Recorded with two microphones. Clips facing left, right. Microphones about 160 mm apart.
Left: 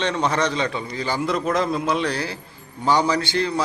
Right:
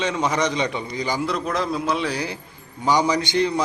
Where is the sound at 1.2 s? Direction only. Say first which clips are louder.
Left 2 dB; centre (ahead or behind).